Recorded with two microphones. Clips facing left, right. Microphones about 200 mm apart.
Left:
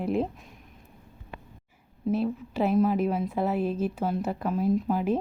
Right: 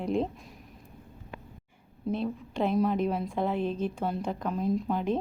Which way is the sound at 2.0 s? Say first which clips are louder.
Left 4 dB; 5° left (ahead or behind).